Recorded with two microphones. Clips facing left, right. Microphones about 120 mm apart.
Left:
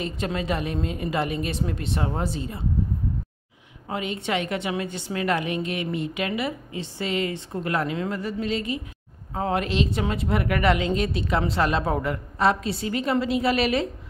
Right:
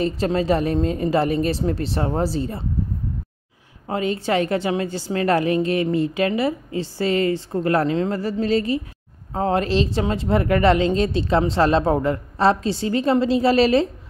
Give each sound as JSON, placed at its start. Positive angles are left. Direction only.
{"t": 0.0, "sound": "a woman's voice", "side_deg": -35}
{"t": 3.8, "sound": "a woman's voice", "side_deg": -35}